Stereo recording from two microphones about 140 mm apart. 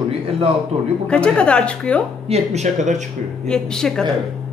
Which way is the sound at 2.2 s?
50° right (ahead or behind).